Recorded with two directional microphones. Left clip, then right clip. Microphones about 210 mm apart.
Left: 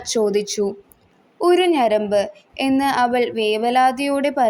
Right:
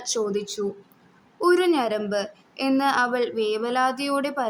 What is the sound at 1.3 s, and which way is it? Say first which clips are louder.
A woman's voice: left 4 dB; 5° left (ahead or behind).